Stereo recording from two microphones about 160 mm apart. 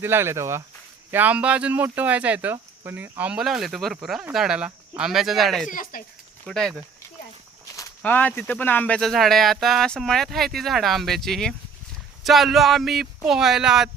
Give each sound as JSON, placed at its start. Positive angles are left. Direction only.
{"t": 0.0, "sound": "speech", "side_deg": -15}
{"t": 5.6, "sound": "speech", "side_deg": 60}
{"t": 6.5, "sound": "speech", "side_deg": 5}
{"t": 8.0, "sound": "speech", "side_deg": 10}